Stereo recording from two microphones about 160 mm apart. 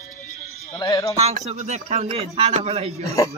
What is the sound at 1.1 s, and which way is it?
A man's voice, 45° right (ahead or behind).